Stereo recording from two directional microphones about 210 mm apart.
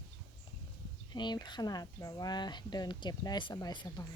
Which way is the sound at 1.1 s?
20° left (ahead or behind).